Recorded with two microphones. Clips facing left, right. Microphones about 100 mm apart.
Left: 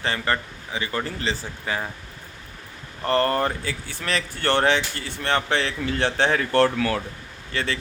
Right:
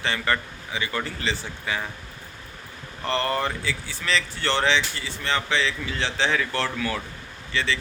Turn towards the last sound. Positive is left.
turn(degrees=50)  # may be behind; listen again after turning